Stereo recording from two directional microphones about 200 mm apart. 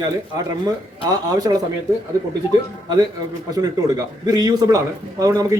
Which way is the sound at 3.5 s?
20° right (ahead or behind).